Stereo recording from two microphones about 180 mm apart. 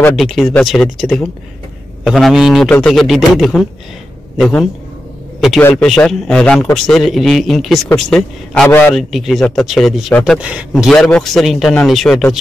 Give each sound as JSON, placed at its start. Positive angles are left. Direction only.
{"t": 0.1, "sound": "a man's voice", "side_deg": 0}
{"t": 8.9, "sound": "speech", "side_deg": 0}